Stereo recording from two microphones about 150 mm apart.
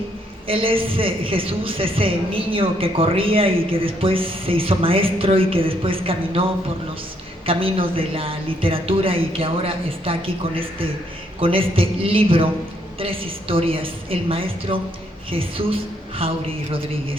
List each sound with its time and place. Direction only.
0.4 s a man's voice: 35° right (ahead or behind)